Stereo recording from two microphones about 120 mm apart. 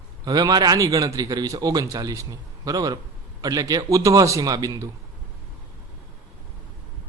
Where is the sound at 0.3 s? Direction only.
35° right (ahead or behind).